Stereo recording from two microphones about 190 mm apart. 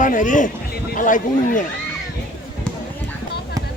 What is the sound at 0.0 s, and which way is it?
Speech, 40° left (ahead or behind).